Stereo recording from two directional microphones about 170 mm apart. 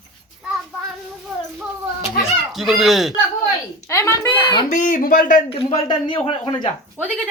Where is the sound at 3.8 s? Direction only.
15° left (ahead or behind).